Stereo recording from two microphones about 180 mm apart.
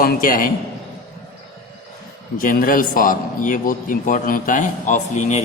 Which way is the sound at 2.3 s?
50° left (ahead or behind).